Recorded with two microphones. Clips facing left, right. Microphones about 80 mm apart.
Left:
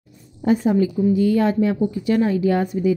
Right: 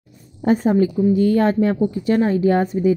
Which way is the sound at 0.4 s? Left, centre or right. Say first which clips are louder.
Right 1 dB; right.